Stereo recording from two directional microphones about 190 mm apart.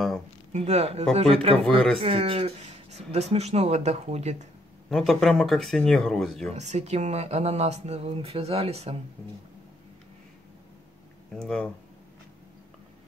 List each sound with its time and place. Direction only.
0.5 s speech: 35° right (ahead or behind)
4.8 s speech: 5° left (ahead or behind)
6.5 s speech: 35° right (ahead or behind)
11.3 s speech: 5° left (ahead or behind)